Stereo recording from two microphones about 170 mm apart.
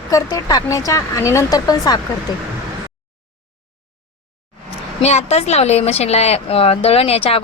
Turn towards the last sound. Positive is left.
turn(degrees=35)  # may be behind; listen again after turning